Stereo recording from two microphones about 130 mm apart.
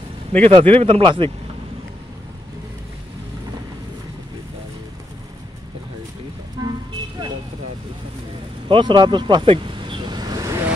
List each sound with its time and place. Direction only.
0.5 s speech: 45° right (ahead or behind)
6.6 s vehicle: 35° right (ahead or behind)
8.6 s vehicle: 40° right (ahead or behind)